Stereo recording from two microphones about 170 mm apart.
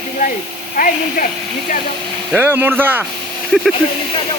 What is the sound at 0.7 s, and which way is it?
Speech, 50° left (ahead or behind).